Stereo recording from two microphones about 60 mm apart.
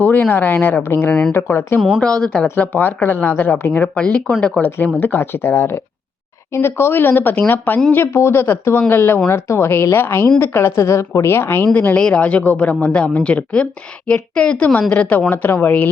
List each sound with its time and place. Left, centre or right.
0.0 s speech: left
2.0 s a woman's voice: centre
2.7 s speech: left
4.9 s a woman's voice: left
7.9 s a woman's voice: left
11.9 s a woman's voice: centre
14.8 s speech: left